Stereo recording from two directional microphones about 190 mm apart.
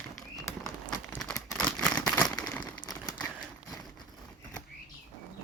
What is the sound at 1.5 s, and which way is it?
Crumpling, 5° left (ahead or behind).